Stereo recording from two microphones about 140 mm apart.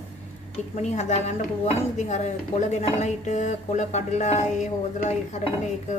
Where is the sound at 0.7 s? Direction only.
55° left (ahead or behind).